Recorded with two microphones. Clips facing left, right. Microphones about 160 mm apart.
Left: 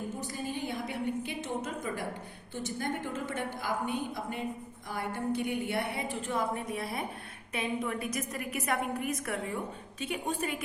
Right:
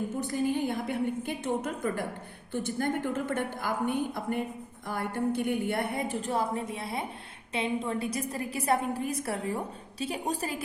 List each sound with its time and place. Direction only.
0.2 s a woman's voice: 55° right (ahead or behind); by 10.6 s 35° right (ahead or behind)